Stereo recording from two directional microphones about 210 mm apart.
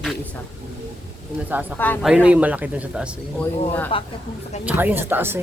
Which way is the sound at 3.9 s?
25° left (ahead or behind).